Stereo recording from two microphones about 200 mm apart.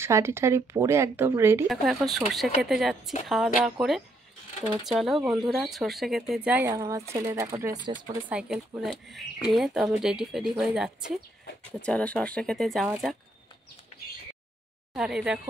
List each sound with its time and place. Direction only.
0.0 s speech: 15° right (ahead or behind)
1.7 s speech: centre (ahead or behind); by 7.9 s 15° right (ahead or behind)
8.3 s speech: 5° right (ahead or behind)
15.0 s speech: 5° right (ahead or behind)